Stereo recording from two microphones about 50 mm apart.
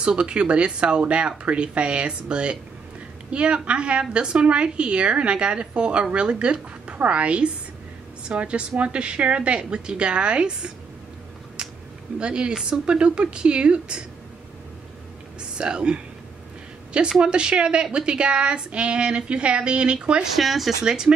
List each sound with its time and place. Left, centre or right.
0.0 s a woman's voice: centre
12.2 s a woman's voice: centre
15.5 s a woman's voice: centre
17.2 s a woman's voice: centre
20.3 s speech: centre
20.8 s speech: centre